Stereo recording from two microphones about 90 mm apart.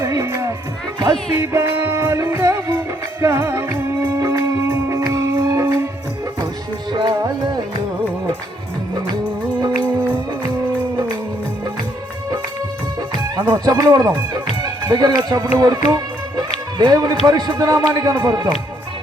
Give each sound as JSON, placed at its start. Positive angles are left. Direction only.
{"t": 0.0, "sound": "music", "side_deg": -40}
{"t": 6.9, "sound": "music", "side_deg": -55}
{"t": 13.0, "sound": "music", "side_deg": -50}
{"t": 13.5, "sound": "speech", "side_deg": -45}